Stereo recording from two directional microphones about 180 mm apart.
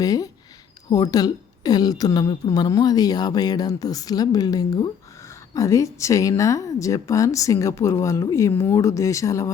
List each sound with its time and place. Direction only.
0.0 s a woman's voice: 20° left (ahead or behind)